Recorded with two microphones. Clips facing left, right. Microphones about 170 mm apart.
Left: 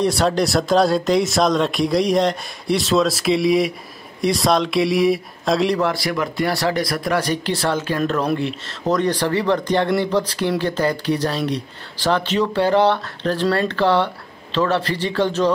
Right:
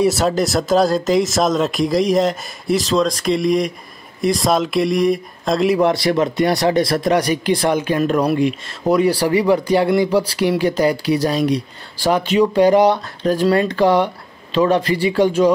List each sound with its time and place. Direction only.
0.0 s speech: 5° right (ahead or behind)
5.8 s speech: 20° right (ahead or behind)